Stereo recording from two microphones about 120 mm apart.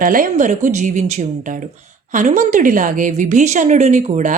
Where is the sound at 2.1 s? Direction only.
90° right.